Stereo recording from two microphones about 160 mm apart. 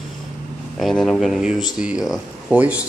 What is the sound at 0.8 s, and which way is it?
Speech, centre (ahead or behind).